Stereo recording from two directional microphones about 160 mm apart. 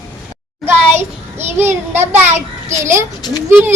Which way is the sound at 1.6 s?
15° right (ahead or behind).